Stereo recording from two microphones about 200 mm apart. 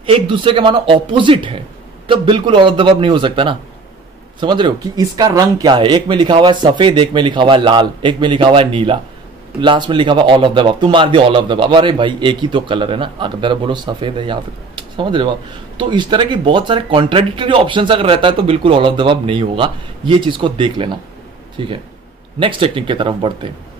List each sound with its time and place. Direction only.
0.0 s speech: 25° right (ahead or behind)